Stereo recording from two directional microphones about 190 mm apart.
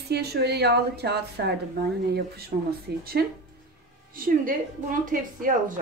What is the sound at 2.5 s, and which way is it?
Speech, 45° right (ahead or behind).